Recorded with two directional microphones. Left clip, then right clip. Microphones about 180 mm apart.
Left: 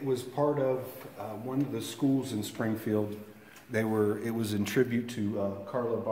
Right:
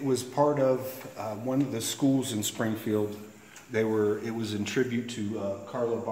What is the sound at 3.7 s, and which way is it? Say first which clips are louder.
Speech: right 3 dB; 70° left (ahead or behind).